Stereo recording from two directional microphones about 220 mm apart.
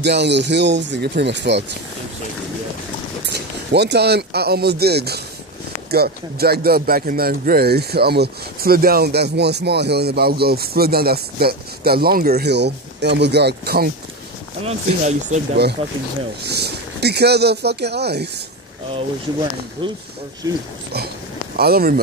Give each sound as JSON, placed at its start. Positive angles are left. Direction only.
{"t": 0.0, "sound": "speech", "side_deg": -50}
{"t": 3.3, "sound": "speech", "side_deg": -50}
{"t": 14.6, "sound": "speech", "side_deg": -30}
{"t": 16.4, "sound": "speech", "side_deg": -50}
{"t": 19.8, "sound": "speech", "side_deg": -20}
{"t": 21.5, "sound": "speech", "side_deg": -45}